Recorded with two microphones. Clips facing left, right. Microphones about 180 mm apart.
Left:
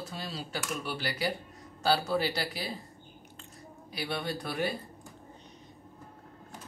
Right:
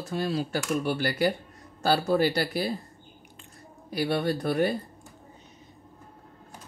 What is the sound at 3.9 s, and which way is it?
Speech, 50° right (ahead or behind).